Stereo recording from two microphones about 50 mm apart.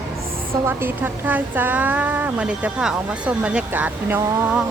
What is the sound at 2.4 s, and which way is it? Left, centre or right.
Speech, right.